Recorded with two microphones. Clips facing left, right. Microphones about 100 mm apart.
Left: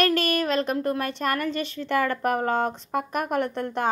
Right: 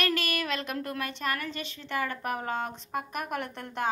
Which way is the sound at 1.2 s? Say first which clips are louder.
Left 7 dB; 50° left (ahead or behind).